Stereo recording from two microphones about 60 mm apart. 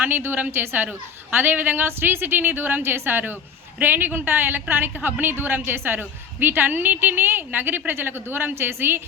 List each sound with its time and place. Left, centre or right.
0.0 s a woman's voice: right